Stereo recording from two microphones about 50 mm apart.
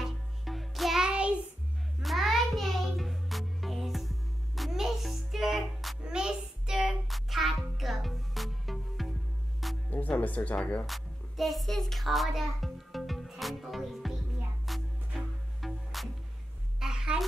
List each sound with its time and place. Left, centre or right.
0.0 s music: centre
1.0 s child singing: right
2.0 s music: centre
6.0 s music: centre
9.8 s speech: left
10.9 s music: centre
16.8 s a sound: centre